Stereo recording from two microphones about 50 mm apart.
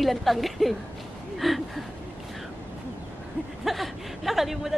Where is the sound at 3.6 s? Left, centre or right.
Centre.